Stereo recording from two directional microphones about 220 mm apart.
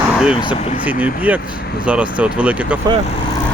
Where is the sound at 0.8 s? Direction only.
5° right (ahead or behind).